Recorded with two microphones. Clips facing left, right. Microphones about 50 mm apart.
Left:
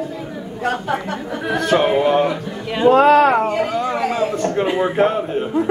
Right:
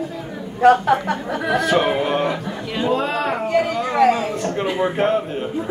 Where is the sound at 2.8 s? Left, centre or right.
Left.